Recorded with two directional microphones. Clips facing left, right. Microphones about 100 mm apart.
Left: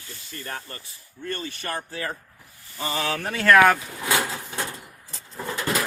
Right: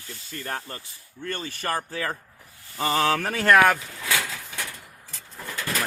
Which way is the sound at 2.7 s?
55° right (ahead or behind).